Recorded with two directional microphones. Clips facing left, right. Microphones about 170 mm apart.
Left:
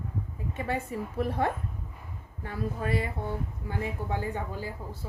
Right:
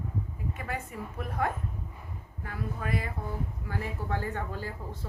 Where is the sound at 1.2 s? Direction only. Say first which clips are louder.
Left 3 dB; 30° left (ahead or behind).